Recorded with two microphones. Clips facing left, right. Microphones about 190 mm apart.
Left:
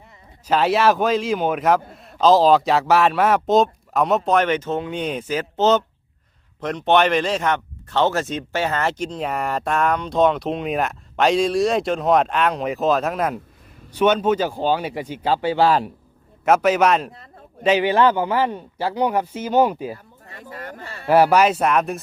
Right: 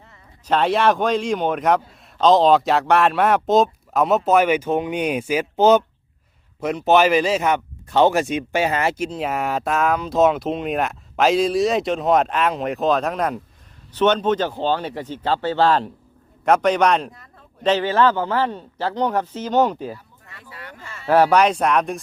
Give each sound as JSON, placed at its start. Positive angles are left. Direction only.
{"t": 0.4, "sound": "speech", "side_deg": 5}
{"t": 17.1, "sound": "a sound", "side_deg": 25}
{"t": 17.6, "sound": "speech", "side_deg": 10}
{"t": 20.2, "sound": "speech", "side_deg": 40}
{"t": 21.1, "sound": "speech", "side_deg": 10}